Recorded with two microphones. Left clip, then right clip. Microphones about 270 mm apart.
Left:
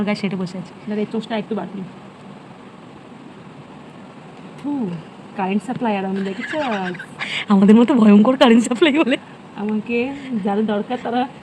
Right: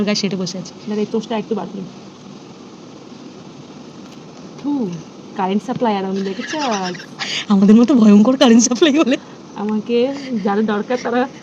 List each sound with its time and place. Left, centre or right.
0.0 s speech: centre
1.3 s speech: left
5.4 s speech: centre